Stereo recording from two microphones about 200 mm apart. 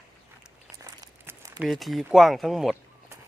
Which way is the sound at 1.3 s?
5° right (ahead or behind).